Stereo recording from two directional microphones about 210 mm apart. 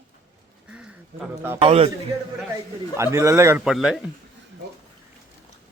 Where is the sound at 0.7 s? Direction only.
5° right (ahead or behind).